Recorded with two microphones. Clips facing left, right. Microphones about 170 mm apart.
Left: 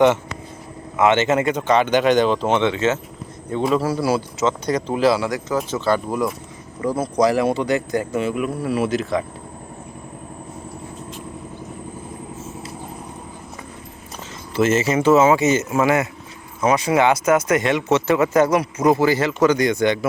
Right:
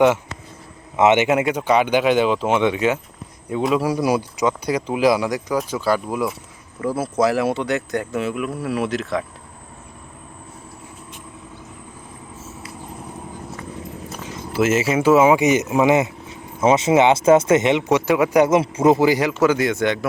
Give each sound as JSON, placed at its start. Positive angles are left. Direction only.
{"t": 0.9, "sound": "speech", "side_deg": -20}
{"t": 14.3, "sound": "speech", "side_deg": -10}